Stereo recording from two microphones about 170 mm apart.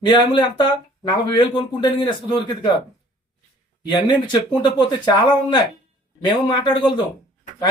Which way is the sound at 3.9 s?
25° left (ahead or behind).